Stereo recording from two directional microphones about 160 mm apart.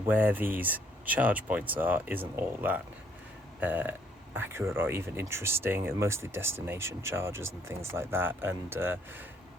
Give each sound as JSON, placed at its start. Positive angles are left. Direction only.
{"t": 0.1, "sound": "speech", "side_deg": -10}